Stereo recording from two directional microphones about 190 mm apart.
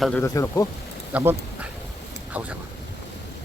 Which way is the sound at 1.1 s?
5° right (ahead or behind).